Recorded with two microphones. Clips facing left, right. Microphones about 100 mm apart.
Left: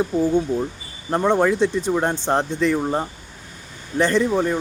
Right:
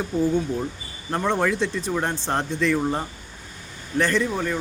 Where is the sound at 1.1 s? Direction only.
20° left (ahead or behind).